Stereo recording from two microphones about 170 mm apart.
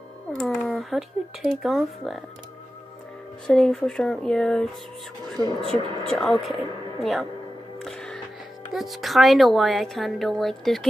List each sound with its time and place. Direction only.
0.3 s a woman's voice: 5° left (ahead or behind)
3.4 s a woman's voice: 5° left (ahead or behind)
5.4 s speech: 25° right (ahead or behind)
6.0 s a woman's voice: centre (ahead or behind)
7.8 s music: 5° left (ahead or behind)
8.7 s a woman's voice: centre (ahead or behind)